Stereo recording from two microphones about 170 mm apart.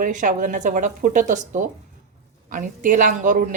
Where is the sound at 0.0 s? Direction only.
50° right (ahead or behind).